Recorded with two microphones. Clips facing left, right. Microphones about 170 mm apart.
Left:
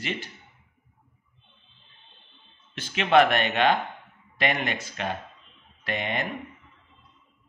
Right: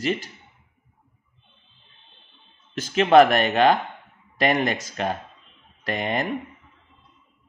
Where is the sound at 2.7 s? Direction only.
40° right (ahead or behind).